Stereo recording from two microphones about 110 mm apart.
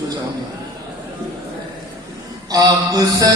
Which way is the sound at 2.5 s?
35° right (ahead or behind).